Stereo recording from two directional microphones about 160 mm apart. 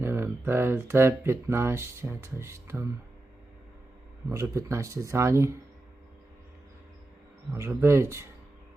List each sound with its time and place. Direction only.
0.0 s speech: 15° right (ahead or behind)
4.3 s speech: 20° right (ahead or behind)
7.5 s speech: 15° right (ahead or behind)